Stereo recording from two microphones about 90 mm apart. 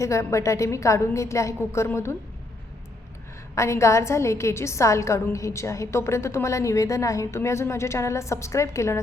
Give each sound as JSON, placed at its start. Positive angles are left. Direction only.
{"t": 0.0, "sound": "a woman's voice", "side_deg": 35}
{"t": 3.5, "sound": "a woman's voice", "side_deg": 35}